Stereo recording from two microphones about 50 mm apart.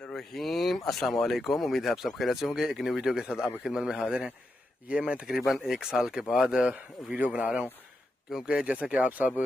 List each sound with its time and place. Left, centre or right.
0.0 s speech: centre
4.8 s a man's voice: right
5.5 s a man's voice: centre
9.1 s speech: right